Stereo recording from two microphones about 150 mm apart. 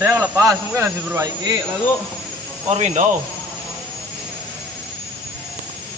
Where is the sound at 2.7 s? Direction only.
50° right (ahead or behind).